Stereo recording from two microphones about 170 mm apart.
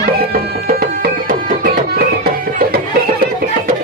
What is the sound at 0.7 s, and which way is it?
Music, 60° right (ahead or behind).